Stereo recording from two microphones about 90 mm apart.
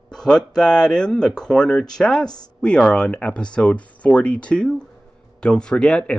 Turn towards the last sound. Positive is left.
turn(degrees=10)  # may be behind; listen again after turning